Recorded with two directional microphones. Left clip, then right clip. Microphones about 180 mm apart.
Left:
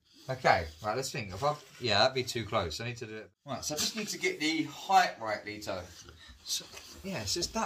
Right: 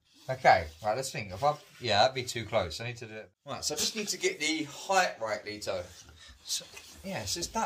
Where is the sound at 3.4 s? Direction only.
55° right (ahead or behind).